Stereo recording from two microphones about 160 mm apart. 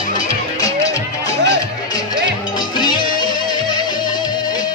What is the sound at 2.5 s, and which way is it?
Music, 25° left (ahead or behind).